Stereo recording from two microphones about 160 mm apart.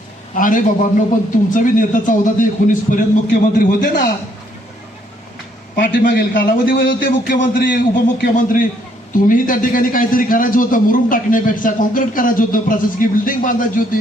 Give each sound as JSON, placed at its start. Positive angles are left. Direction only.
{"t": 0.3, "sound": "a man's voice", "side_deg": 55}
{"t": 5.7, "sound": "a man's voice", "side_deg": 60}